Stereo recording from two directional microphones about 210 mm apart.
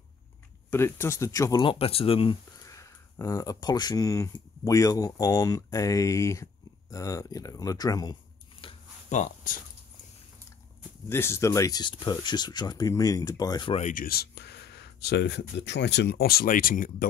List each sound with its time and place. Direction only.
0.7 s speech: 10° left (ahead or behind); by 9.6 s 35° left (ahead or behind)
11.1 s speech: 10° left (ahead or behind); by 16.9 s 40° left (ahead or behind)